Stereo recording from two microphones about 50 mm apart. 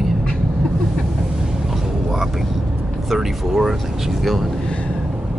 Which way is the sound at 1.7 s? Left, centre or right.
Centre.